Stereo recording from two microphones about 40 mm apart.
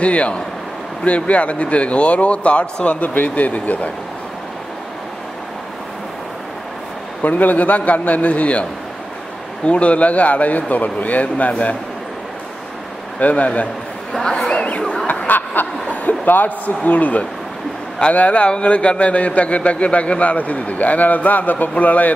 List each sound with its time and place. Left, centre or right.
0.0 s a man's voice: left
7.2 s a man's voice: left
9.7 s a man's voice: left
13.2 s a man's voice: left
14.1 s speech: centre
14.5 s speech: left
15.2 s snicker: left
15.9 s a sound: left
16.3 s a man's voice: left